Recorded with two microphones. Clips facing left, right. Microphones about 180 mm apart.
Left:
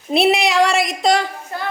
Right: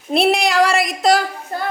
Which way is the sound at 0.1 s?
Centre (ahead or behind).